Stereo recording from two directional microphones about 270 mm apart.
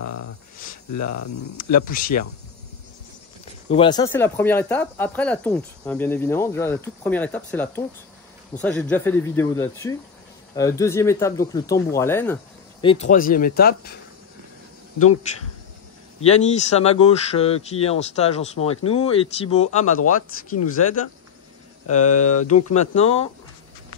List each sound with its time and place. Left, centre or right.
0.0 s a sound: left
0.9 s speech: left
1.9 s speech: left
3.7 s speech: centre
12.8 s speech: left
16.2 s speech: left
18.8 s speech: left
21.8 s speech: left